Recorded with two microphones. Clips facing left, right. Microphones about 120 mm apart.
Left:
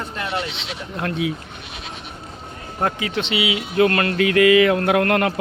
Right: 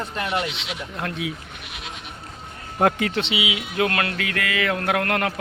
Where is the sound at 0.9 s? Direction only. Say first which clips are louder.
Left 6 dB; centre (ahead or behind).